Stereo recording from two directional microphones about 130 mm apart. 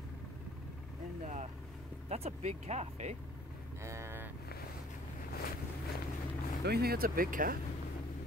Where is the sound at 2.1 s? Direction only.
55° right (ahead or behind).